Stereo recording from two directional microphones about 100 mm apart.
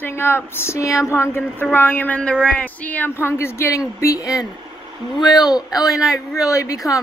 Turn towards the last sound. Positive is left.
turn(degrees=35)  # may be behind; listen again after turning